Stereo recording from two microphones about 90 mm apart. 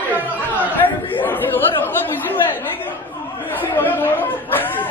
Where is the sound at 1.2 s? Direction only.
20° left (ahead or behind).